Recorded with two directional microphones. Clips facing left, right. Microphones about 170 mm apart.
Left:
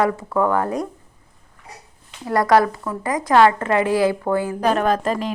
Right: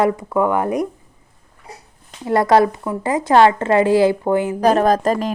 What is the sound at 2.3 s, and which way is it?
A woman's voice, 25° right (ahead or behind).